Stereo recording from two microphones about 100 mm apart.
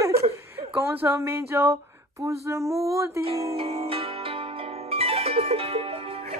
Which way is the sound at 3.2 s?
85° right.